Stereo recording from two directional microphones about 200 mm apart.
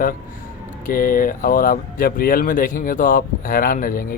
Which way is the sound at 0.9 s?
45° left (ahead or behind).